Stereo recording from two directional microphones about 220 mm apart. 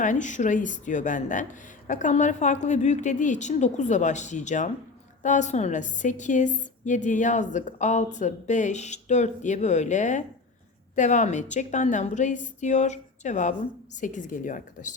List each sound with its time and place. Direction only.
0.0 s a woman's voice: 35° left (ahead or behind)